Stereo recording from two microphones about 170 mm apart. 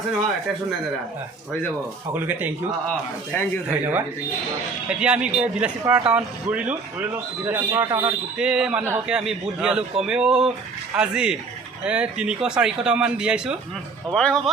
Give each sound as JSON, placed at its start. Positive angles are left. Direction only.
{"t": 2.1, "sound": "a man's voice", "side_deg": -10}
{"t": 3.3, "sound": "speech", "side_deg": 10}
{"t": 3.7, "sound": "a man's voice", "side_deg": -10}
{"t": 7.8, "sound": "a man's voice", "side_deg": -25}
{"t": 8.4, "sound": "speech", "side_deg": -5}